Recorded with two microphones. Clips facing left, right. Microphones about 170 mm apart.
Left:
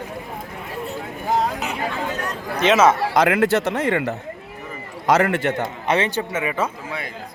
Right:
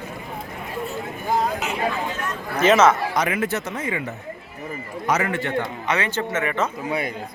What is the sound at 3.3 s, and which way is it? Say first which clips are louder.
Speech: left 7 dB; 85° left.